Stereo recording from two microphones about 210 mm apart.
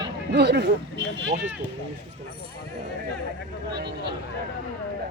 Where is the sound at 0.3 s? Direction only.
55° right (ahead or behind).